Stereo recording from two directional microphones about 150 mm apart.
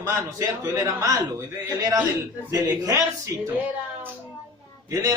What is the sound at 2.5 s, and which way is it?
Speech, 25° right (ahead or behind).